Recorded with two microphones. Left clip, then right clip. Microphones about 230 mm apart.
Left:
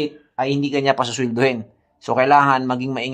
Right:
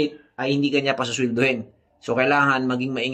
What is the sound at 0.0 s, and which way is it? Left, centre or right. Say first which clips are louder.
Speech: left 2 dB; left.